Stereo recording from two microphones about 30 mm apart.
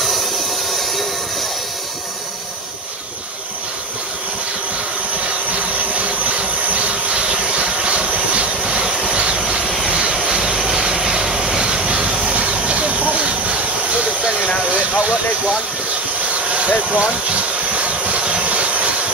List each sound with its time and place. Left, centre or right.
5.5 s a sound: right
9.0 s vehicle: right
10.1 s vehicle: right
11.2 s vehicle: centre
11.6 s vehicle: right
12.4 s hiss: right
14.6 s vehicle: right
16.3 s a sound: right
18.2 s steam: right